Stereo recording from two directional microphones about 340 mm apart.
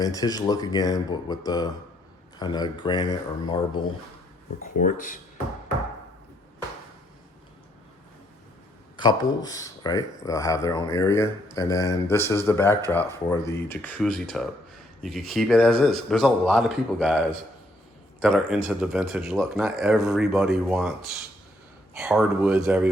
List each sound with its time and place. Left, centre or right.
0.0 s speech: centre
4.6 s speech: left
9.0 s a man's voice: centre
21.9 s speech: centre